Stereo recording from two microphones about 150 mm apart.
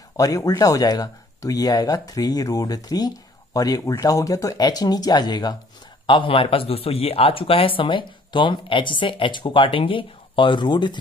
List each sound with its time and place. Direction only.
0.2 s speech: 25° left (ahead or behind)